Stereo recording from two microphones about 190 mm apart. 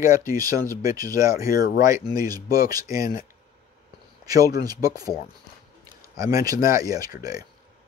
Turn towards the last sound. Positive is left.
turn(degrees=-20)  # may be behind; listen again after turning